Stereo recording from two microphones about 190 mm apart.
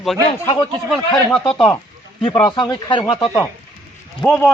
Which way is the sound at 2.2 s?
25° left (ahead or behind).